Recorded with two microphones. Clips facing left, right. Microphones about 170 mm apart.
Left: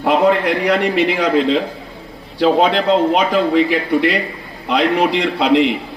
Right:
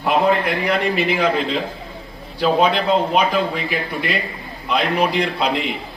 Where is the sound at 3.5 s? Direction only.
75° left (ahead or behind).